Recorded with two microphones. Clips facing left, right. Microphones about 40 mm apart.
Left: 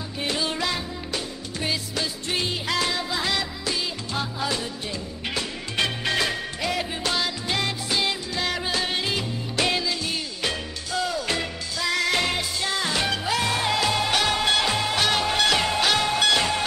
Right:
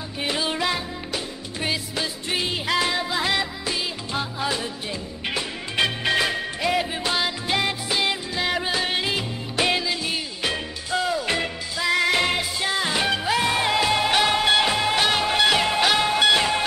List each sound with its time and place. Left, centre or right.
0.2 s music: centre